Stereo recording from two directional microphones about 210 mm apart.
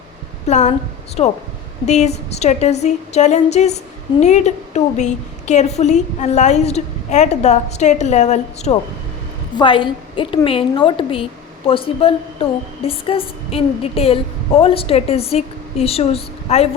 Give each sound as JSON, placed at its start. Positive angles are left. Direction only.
{"t": 0.4, "sound": "a woman's voice", "side_deg": 35}
{"t": 9.6, "sound": "a woman's voice", "side_deg": 25}